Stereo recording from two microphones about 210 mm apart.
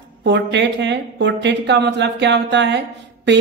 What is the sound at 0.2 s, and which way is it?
Speech, 55° right (ahead or behind).